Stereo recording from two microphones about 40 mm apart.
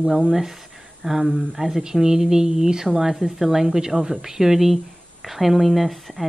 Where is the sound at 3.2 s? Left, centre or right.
Right.